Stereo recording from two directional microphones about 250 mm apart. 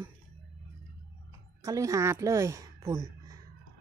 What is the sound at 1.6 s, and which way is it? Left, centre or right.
Speech, centre.